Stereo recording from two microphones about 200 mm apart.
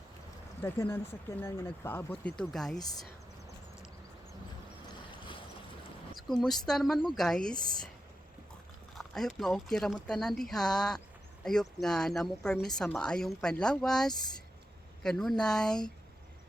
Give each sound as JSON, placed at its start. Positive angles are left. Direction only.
{"t": 0.6, "sound": "speech", "side_deg": 10}
{"t": 2.4, "sound": "a woman's voice", "side_deg": 0}
{"t": 6.1, "sound": "a woman's voice", "side_deg": 0}
{"t": 9.0, "sound": "a woman's voice", "side_deg": 0}